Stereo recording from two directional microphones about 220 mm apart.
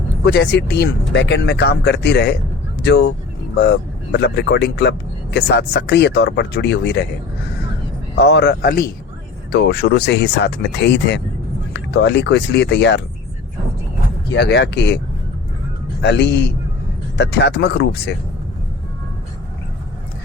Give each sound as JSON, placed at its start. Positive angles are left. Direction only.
{"t": 0.3, "sound": "speech", "side_deg": 50}
{"t": 8.2, "sound": "speech", "side_deg": 50}
{"t": 14.3, "sound": "speech", "side_deg": 50}
{"t": 16.0, "sound": "speech", "side_deg": 50}